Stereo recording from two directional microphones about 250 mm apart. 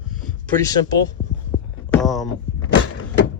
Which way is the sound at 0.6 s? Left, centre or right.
Centre.